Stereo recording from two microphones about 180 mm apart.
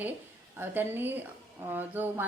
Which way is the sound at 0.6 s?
10° right (ahead or behind).